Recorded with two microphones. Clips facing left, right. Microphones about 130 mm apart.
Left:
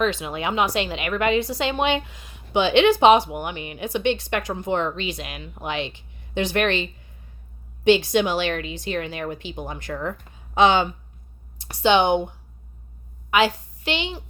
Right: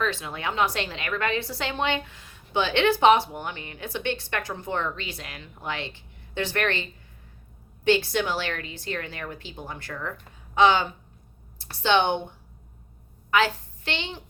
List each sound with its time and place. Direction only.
0.0 s speech: 15° left (ahead or behind)
7.9 s speech: 15° left (ahead or behind)
13.8 s speech: 15° left (ahead or behind)